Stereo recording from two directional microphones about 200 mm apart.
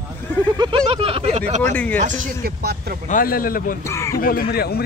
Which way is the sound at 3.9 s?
15° left (ahead or behind).